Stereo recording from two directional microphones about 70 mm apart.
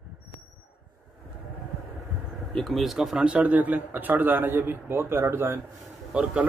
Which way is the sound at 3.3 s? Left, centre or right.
Right.